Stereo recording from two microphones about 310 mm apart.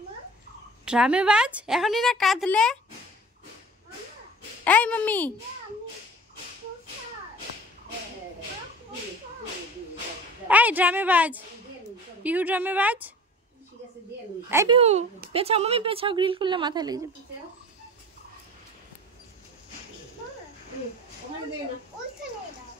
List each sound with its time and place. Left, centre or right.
0.8 s a woman's voice: centre
4.6 s a woman's voice: centre
10.5 s a woman's voice: centre
14.5 s speech: centre